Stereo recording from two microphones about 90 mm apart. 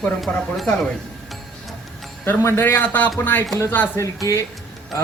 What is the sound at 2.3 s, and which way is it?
A man's voice, 25° left (ahead or behind).